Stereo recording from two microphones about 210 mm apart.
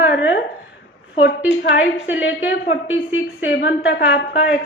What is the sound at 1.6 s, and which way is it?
Speech, 65° left (ahead or behind).